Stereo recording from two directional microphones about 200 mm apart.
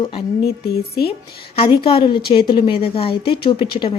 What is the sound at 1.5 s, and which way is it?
A woman's voice, 25° left (ahead or behind).